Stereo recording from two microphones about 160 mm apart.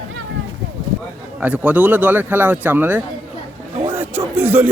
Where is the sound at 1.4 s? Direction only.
10° right (ahead or behind).